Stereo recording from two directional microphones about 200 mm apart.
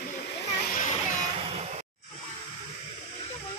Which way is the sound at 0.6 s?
40° left (ahead or behind).